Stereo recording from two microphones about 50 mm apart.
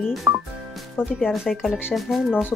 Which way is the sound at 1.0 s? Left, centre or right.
Left.